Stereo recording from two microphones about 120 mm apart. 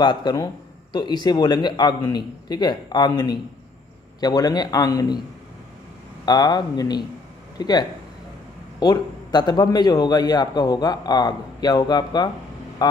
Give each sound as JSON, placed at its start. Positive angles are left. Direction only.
{"t": 0.0, "sound": "a man's voice", "side_deg": 35}
{"t": 6.2, "sound": "a man's voice", "side_deg": 35}